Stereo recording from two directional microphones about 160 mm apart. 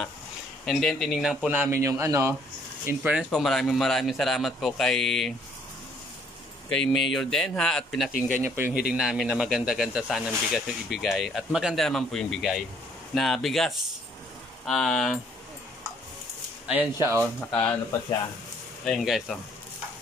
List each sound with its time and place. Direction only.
0.7 s speech: centre (ahead or behind)
6.7 s speech: centre (ahead or behind)
8.4 s speech: 15° right (ahead or behind)
8.9 s speech: 5° right (ahead or behind)
16.6 s speech: 15° right (ahead or behind)
18.9 s speech: centre (ahead or behind)